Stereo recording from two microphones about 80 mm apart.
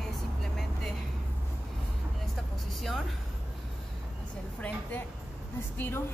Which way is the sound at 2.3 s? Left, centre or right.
Centre.